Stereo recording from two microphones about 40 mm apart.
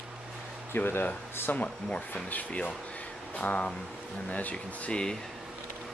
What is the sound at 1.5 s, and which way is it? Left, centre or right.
Speech, left.